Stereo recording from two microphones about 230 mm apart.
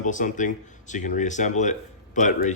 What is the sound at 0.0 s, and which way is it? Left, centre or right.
Speech, left.